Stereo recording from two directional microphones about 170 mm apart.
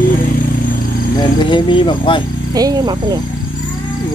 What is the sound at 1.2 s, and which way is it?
Speech, 25° left (ahead or behind).